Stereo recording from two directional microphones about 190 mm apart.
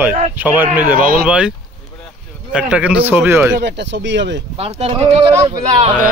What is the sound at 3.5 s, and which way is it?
Speech, 65° right (ahead or behind).